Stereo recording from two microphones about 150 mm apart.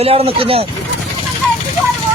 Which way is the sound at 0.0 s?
40° right (ahead or behind).